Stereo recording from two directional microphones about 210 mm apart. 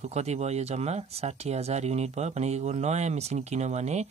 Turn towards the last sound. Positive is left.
turn(degrees=-30)  # may be behind; listen again after turning